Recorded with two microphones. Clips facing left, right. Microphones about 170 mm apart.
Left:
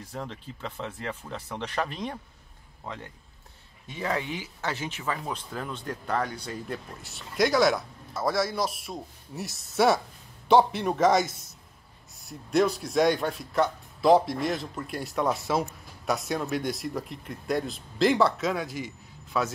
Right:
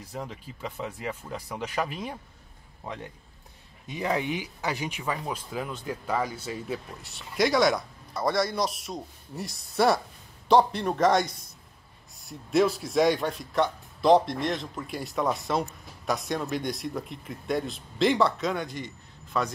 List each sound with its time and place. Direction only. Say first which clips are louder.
0.0 s speech: even; 10° right (ahead or behind)
5.1 s speech: right 1 dB; 5° right (ahead or behind)